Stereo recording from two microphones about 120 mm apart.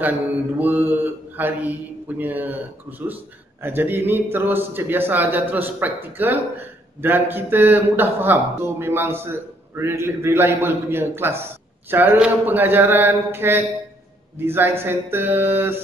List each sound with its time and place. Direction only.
0.6 s mantra: 15° right (ahead or behind)
6.1 s speech: 15° right (ahead or behind)
11.9 s mantra: 15° right (ahead or behind)
14.4 s speech: 20° right (ahead or behind)